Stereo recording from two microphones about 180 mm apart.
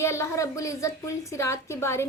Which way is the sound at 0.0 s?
15° left (ahead or behind).